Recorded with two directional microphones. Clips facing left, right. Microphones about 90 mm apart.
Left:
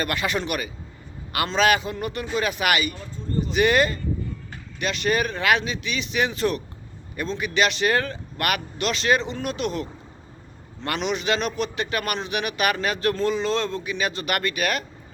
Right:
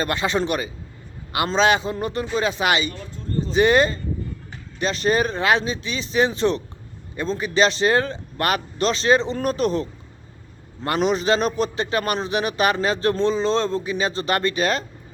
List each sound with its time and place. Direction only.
0.0 s a man's voice: 30° right (ahead or behind)
10.8 s speech: 35° right (ahead or behind)